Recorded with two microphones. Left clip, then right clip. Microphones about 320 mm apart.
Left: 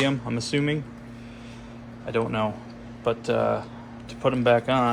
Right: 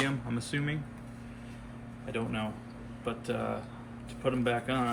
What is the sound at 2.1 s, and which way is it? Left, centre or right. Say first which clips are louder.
Speech: left 11 dB; centre.